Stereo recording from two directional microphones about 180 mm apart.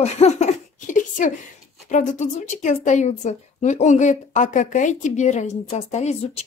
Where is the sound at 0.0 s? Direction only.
40° left (ahead or behind).